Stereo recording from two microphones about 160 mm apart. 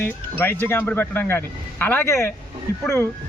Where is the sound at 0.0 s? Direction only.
10° left (ahead or behind).